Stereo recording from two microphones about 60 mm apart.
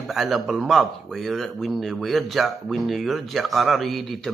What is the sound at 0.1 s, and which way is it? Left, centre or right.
Speech, centre.